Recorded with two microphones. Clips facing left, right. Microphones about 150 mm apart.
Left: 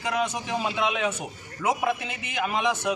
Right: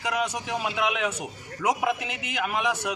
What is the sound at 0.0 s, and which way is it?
A man's voice, 10° right (ahead or behind).